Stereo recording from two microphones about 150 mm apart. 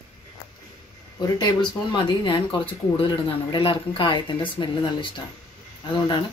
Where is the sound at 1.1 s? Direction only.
25° left (ahead or behind).